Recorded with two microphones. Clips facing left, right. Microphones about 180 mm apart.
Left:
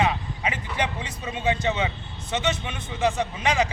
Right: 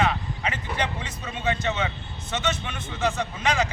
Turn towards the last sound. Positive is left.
turn(degrees=15)  # may be behind; listen again after turning